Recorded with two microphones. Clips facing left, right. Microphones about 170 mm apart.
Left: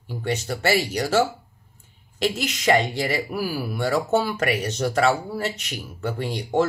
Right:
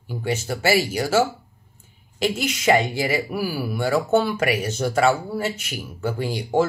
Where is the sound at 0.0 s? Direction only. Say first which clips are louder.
Right 1 dB; 5° right (ahead or behind).